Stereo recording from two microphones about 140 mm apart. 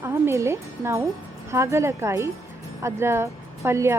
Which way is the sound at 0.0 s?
20° right (ahead or behind).